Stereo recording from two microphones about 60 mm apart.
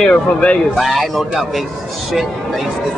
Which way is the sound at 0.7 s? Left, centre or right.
Centre.